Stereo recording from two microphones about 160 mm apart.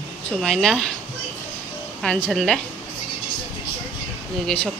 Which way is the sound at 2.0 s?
5° left (ahead or behind).